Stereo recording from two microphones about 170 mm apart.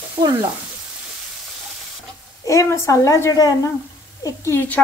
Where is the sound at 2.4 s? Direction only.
20° left (ahead or behind).